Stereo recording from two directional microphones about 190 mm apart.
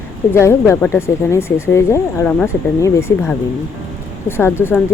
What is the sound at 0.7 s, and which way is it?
Speech, 15° left (ahead or behind).